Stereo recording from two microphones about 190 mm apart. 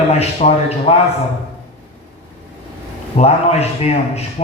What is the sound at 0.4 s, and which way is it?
Speech, 40° left (ahead or behind).